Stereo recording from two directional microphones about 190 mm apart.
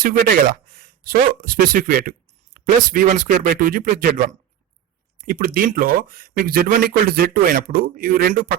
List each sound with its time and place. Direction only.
0.0 s speech: 50° right (ahead or behind)